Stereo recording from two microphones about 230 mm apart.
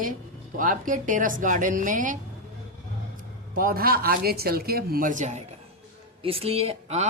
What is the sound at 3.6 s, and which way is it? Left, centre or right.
Speech, right.